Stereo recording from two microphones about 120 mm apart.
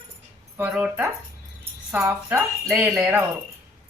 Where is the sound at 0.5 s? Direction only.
15° right (ahead or behind).